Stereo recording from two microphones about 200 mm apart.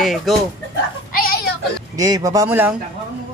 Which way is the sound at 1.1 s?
45° left (ahead or behind).